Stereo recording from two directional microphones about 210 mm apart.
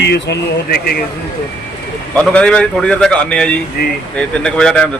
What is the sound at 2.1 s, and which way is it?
A man's voice, 5° left (ahead or behind).